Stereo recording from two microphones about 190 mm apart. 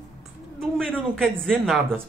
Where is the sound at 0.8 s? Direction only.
Centre (ahead or behind).